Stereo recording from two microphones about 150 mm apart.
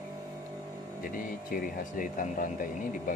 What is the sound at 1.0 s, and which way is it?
Speech, 70° left (ahead or behind).